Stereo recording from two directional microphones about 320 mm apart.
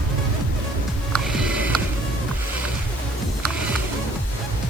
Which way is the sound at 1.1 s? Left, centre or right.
Centre.